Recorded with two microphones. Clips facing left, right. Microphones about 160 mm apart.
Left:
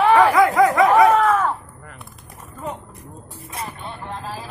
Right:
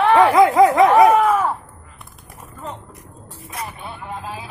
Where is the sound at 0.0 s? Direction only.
Centre (ahead or behind).